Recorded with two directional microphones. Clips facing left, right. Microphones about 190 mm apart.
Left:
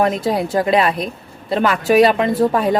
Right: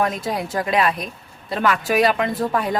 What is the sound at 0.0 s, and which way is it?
Speech, 30° left (ahead or behind).